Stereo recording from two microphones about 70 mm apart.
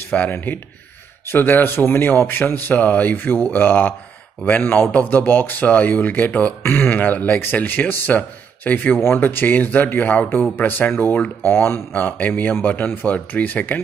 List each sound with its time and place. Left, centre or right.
0.1 s speech: left